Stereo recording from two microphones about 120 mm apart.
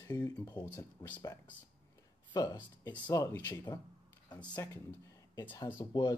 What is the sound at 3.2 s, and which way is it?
Speech, 20° left (ahead or behind).